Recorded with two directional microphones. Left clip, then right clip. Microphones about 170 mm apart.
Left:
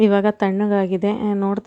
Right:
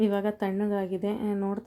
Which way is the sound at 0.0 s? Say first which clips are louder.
Left 11 dB; 25° left (ahead or behind).